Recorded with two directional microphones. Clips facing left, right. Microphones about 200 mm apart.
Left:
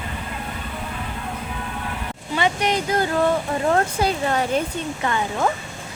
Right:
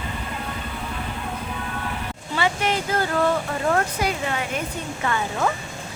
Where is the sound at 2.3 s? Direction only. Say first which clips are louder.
Left 2 dB; 20° left (ahead or behind).